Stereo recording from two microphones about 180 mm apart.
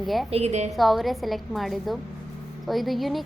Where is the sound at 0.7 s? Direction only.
Centre (ahead or behind).